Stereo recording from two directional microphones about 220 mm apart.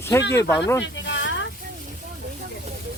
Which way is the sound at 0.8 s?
55° left (ahead or behind).